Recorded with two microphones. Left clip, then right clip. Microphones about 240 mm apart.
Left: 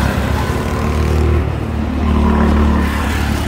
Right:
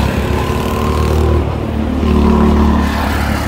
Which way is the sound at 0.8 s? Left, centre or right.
Right.